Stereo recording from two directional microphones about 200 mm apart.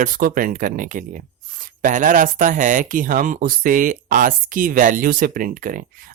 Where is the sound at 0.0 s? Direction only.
45° right (ahead or behind).